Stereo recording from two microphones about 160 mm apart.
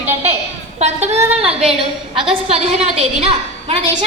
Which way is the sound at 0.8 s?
45° right (ahead or behind).